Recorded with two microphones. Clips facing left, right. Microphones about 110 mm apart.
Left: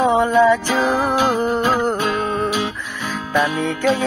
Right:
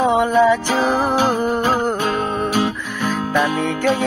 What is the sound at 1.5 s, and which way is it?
Music, centre (ahead or behind).